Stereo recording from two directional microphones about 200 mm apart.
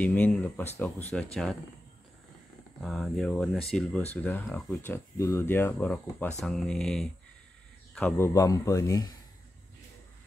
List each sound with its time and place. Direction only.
0.0 s speech: 10° left (ahead or behind)
2.8 s speech: centre (ahead or behind)